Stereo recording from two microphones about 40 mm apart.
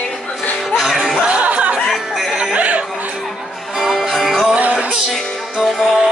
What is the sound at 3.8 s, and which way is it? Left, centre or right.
Music, centre.